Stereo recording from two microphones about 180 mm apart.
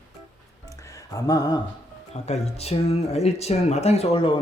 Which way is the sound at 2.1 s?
35° left (ahead or behind).